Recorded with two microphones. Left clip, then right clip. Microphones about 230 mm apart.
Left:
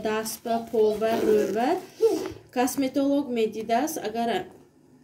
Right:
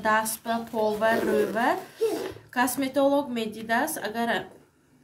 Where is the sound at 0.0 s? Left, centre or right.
Right.